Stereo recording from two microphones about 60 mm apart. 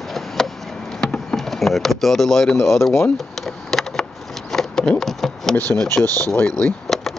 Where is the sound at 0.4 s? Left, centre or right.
Centre.